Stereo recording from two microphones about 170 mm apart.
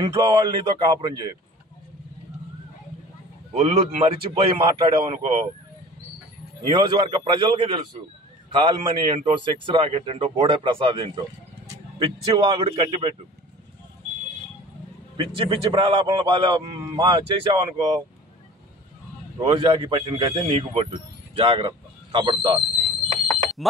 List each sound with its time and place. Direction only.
0.0 s a man's voice: 30° right (ahead or behind)
3.5 s a man's voice: 35° right (ahead or behind)
6.7 s a man's voice: 30° right (ahead or behind)
15.1 s a man's voice: 30° right (ahead or behind)
19.4 s a man's voice: 30° right (ahead or behind)